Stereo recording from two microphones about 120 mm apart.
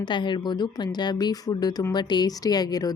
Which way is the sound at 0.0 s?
40° left (ahead or behind).